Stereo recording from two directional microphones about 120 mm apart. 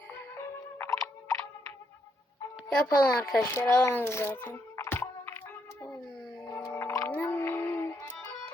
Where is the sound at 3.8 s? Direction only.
20° left (ahead or behind).